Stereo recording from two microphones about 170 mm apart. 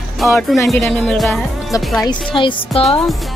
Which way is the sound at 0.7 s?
Centre (ahead or behind).